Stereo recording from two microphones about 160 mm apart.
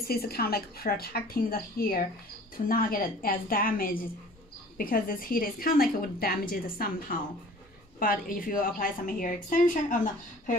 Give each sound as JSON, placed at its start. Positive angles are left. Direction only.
{"t": 0.0, "sound": "a woman's voice", "side_deg": 75}